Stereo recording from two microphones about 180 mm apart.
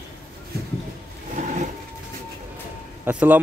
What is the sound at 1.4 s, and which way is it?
Vehicle, 40° right (ahead or behind).